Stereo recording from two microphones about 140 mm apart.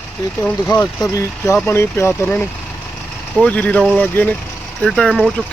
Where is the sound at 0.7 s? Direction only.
25° left (ahead or behind).